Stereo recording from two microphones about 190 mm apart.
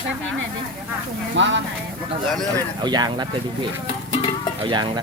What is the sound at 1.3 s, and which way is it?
Speech, 75° right (ahead or behind).